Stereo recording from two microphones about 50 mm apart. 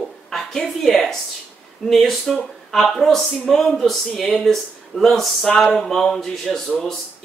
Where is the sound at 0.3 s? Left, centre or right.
Centre.